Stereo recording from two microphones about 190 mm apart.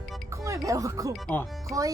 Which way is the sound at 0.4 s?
15° right (ahead or behind).